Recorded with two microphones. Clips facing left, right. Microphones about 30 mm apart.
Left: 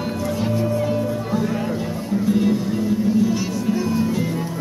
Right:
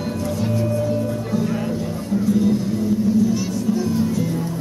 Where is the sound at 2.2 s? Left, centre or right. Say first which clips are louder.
Even; left.